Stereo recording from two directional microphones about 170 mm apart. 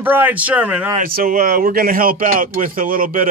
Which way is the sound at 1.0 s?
55° right (ahead or behind).